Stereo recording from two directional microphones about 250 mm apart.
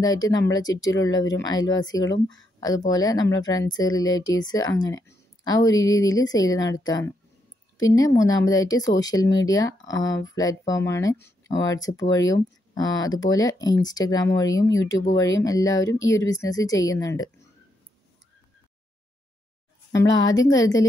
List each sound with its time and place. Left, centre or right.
0.0 s speech: centre
2.0 s speech: left
2.9 s speech: centre
20.1 s speech: left